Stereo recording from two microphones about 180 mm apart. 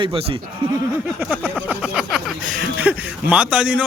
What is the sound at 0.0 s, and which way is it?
Speech, 30° right (ahead or behind).